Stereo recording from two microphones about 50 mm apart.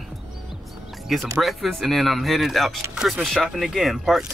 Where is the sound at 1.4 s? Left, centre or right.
Centre.